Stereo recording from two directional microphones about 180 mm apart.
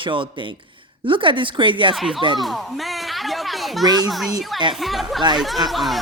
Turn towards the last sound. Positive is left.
turn(degrees=0)  # may be behind; listen again after turning